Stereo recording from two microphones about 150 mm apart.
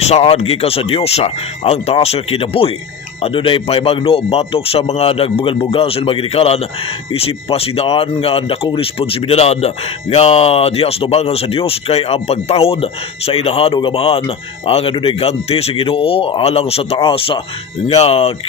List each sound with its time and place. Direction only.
0.1 s speech: 45° left (ahead or behind)